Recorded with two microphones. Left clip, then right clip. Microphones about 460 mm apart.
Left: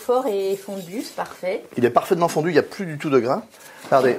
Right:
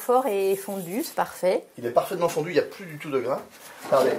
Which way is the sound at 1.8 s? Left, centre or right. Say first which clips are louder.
Left 5 dB; left.